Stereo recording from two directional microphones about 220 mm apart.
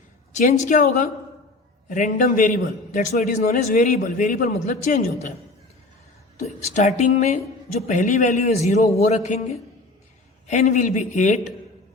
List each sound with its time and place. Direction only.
0.3 s a man's voice: 35° left (ahead or behind)
6.7 s a man's voice: 30° left (ahead or behind)